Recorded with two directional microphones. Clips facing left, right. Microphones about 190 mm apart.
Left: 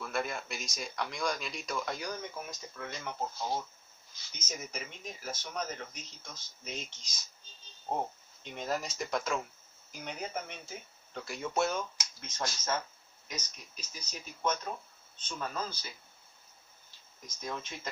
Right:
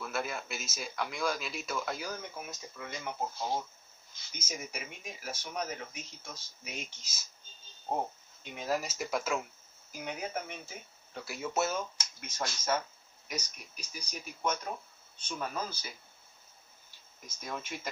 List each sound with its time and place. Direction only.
0.0 s speech: 5° right (ahead or behind)
4.3 s speech: 10° right (ahead or behind)
8.5 s speech: 10° right (ahead or behind)
17.4 s speech: 10° right (ahead or behind)